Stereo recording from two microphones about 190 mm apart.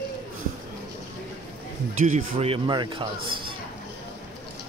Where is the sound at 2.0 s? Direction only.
35° right (ahead or behind).